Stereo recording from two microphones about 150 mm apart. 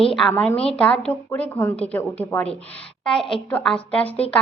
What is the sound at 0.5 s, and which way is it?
Speech, 40° left (ahead or behind).